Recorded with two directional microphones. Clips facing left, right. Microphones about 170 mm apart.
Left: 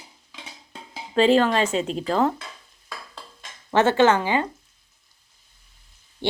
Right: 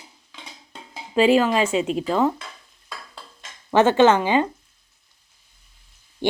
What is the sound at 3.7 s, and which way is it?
Speech, 15° right (ahead or behind).